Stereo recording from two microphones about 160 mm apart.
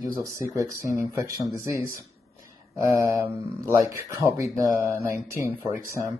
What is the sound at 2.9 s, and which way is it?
Speech, 20° right (ahead or behind).